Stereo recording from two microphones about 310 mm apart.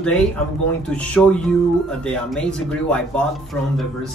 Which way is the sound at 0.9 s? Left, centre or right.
Centre.